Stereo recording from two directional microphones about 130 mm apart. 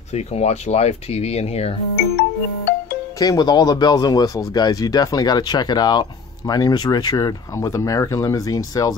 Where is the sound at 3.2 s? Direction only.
30° left (ahead or behind).